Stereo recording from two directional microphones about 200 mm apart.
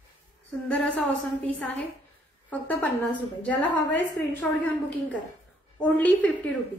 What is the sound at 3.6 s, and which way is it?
Speech, 60° left (ahead or behind).